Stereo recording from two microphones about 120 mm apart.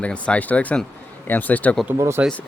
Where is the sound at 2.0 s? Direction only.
20° right (ahead or behind).